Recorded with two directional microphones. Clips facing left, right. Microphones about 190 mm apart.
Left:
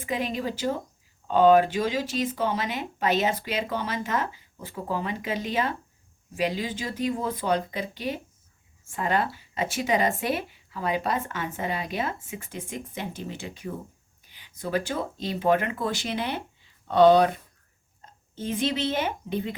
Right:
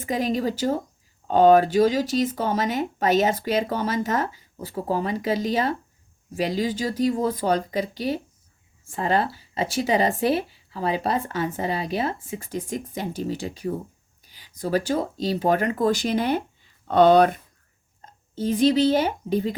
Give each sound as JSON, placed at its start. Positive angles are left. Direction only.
{"t": 0.0, "sound": "speech", "side_deg": -40}
{"t": 16.9, "sound": "speech", "side_deg": -55}
{"t": 18.3, "sound": "speech", "side_deg": -35}